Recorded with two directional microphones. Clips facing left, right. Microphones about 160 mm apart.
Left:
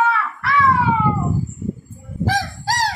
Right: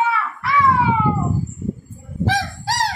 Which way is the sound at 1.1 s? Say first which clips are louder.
Even; centre (ahead or behind).